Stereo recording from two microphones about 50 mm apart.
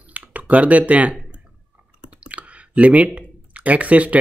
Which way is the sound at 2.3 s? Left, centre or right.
Right.